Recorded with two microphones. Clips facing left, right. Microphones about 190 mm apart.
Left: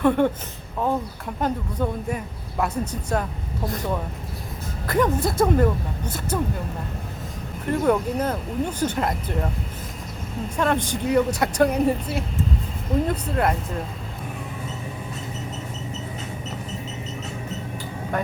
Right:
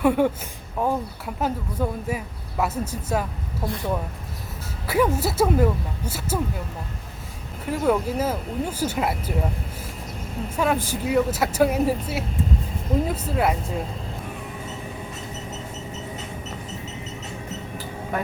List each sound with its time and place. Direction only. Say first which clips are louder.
0.0 s a woman's voice: even; 10° right (ahead or behind)
4.9 s speech: even; 5° right (ahead or behind)
7.7 s speech: left 1 dB; 5° right (ahead or behind)
10.6 s speech: even; 5° right (ahead or behind)